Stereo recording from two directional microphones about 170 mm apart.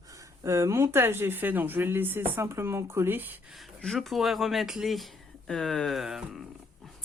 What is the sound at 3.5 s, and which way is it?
Speech, centre (ahead or behind).